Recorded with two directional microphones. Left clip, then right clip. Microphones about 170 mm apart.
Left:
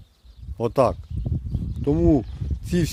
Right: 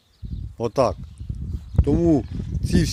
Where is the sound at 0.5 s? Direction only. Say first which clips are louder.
Left 1 dB; 5° left (ahead or behind).